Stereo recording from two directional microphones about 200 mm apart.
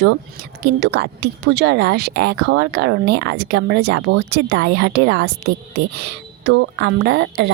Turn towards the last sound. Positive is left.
turn(degrees=-60)  # may be behind; listen again after turning